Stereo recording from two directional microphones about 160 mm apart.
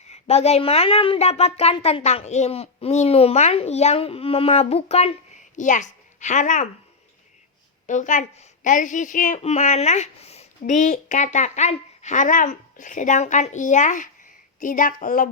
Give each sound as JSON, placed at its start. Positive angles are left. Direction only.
{"t": 0.1, "sound": "a woman's voice", "side_deg": 40}
{"t": 5.5, "sound": "a child's voice", "side_deg": 50}
{"t": 7.9, "sound": "speech", "side_deg": 50}
{"t": 9.4, "sound": "speech", "side_deg": 45}